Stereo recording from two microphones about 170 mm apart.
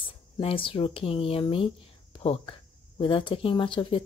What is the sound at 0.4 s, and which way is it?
Speech, 35° left (ahead or behind).